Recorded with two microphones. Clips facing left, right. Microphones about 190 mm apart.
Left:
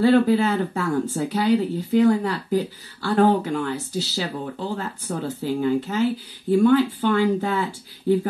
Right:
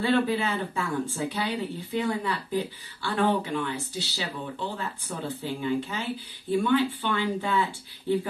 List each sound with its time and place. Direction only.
0.0 s speech: 40° left (ahead or behind)